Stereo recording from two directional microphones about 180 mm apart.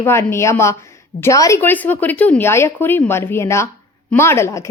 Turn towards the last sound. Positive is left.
turn(degrees=15)  # may be behind; listen again after turning